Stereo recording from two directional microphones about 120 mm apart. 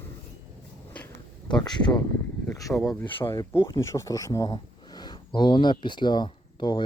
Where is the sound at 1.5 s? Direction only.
40° left (ahead or behind).